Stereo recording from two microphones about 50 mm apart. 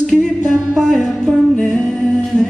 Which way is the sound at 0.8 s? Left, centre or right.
Centre.